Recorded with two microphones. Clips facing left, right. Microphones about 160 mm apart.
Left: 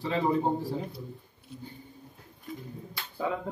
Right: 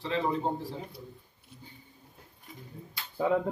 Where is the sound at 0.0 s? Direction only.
10° left (ahead or behind).